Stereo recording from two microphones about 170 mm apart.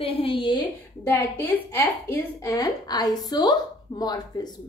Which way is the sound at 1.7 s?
15° left (ahead or behind).